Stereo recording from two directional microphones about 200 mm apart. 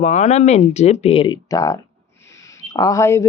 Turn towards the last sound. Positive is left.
turn(degrees=15)  # may be behind; listen again after turning